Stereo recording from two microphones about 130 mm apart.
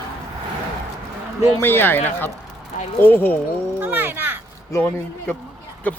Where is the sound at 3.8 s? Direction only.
15° right (ahead or behind).